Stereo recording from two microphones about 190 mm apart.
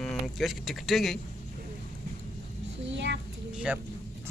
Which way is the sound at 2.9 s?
70° right (ahead or behind).